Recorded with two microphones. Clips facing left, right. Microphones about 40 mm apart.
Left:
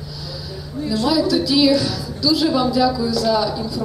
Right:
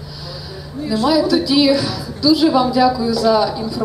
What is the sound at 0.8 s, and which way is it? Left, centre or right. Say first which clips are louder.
A woman's voice: right 3 dB; centre.